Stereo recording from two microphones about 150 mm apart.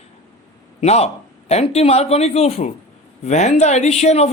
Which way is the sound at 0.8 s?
45° left (ahead or behind).